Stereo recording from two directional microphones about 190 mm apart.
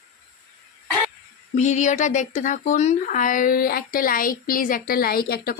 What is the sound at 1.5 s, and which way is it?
Speech, 40° left (ahead or behind).